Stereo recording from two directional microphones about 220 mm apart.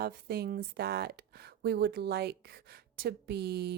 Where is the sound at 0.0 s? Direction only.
45° right (ahead or behind).